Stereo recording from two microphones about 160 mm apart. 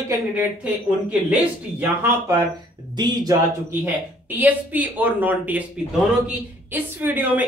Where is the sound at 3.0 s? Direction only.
25° right (ahead or behind).